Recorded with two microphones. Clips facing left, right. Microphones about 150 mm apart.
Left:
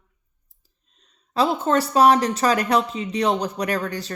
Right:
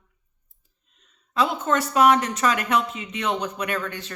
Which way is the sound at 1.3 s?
35° left (ahead or behind).